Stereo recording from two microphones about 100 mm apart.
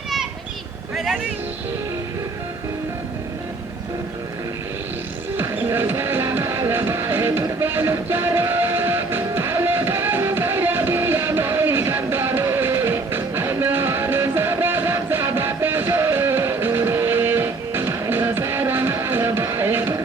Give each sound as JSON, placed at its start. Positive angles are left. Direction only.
{"t": 0.9, "sound": "music", "side_deg": -5}
{"t": 5.4, "sound": "music", "side_deg": -20}